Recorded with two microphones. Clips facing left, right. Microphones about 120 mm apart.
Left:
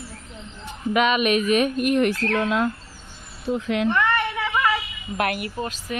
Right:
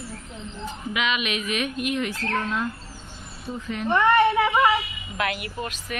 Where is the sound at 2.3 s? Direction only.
85° left.